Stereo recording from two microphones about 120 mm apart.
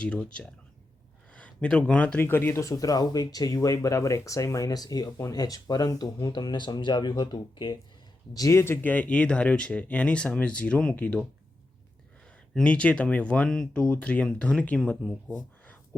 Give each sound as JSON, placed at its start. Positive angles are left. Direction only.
{"t": 0.0, "sound": "speech", "side_deg": 10}
{"t": 8.3, "sound": "speech", "side_deg": 30}
{"t": 12.5, "sound": "speech", "side_deg": 10}